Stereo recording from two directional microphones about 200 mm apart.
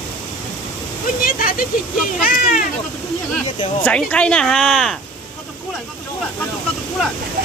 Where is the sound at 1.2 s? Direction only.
45° left (ahead or behind).